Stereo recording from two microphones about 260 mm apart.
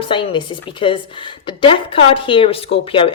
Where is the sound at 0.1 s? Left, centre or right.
Centre.